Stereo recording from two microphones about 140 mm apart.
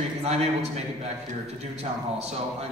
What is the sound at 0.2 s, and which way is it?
A man's voice, 50° right (ahead or behind).